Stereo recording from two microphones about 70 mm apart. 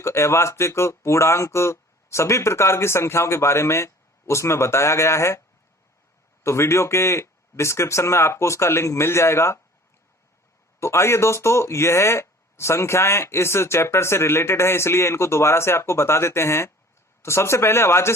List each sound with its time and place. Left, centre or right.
0.0 s speech: left
6.4 s speech: left
10.8 s speech: left